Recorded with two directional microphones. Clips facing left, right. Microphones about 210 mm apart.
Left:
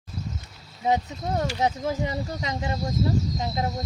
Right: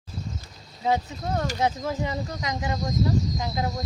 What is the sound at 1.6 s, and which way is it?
Speech, 20° left (ahead or behind).